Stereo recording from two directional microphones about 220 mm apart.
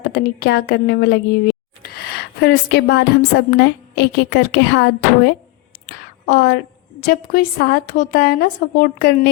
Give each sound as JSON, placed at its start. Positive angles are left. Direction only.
{"t": 0.0, "sound": "a woman's voice", "side_deg": 45}
{"t": 5.8, "sound": "a sound", "side_deg": 45}
{"t": 7.0, "sound": "a woman's voice", "side_deg": 40}